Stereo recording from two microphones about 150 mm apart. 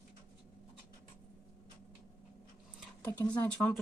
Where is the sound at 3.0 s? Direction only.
10° left (ahead or behind).